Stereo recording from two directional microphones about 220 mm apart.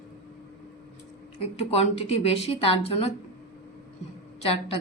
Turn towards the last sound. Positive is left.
turn(degrees=25)  # may be behind; listen again after turning